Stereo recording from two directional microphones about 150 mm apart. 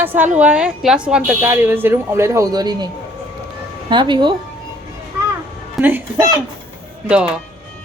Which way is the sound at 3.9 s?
30° right (ahead or behind).